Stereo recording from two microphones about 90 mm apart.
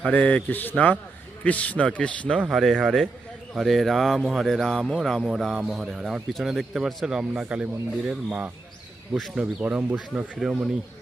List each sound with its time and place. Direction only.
0.0 s a man's voice: 15° left (ahead or behind)
2.5 s a man's voice: centre (ahead or behind)
9.1 s speech: centre (ahead or behind)
9.4 s a man's voice: 15° right (ahead or behind)